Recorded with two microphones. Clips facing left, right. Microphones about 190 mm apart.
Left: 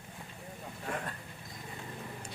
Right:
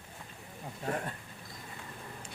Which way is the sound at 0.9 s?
40° right (ahead or behind).